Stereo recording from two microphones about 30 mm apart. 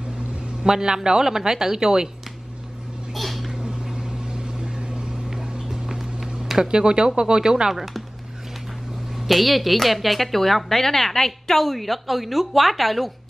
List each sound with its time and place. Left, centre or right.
0.7 s a woman's voice: centre
3.1 s a sound: centre
3.6 s vehicle: right
5.3 s a sound: centre
6.7 s a woman's voice: right
9.1 s a woman's voice: centre